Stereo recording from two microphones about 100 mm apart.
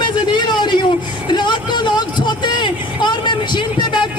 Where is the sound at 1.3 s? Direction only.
50° left (ahead or behind).